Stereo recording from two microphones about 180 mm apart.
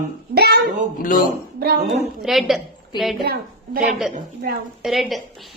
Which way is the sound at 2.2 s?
Centre (ahead or behind).